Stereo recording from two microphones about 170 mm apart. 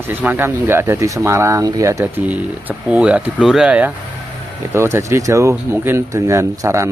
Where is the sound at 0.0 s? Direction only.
10° right (ahead or behind).